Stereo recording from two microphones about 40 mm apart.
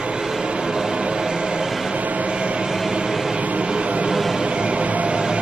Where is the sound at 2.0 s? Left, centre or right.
Right.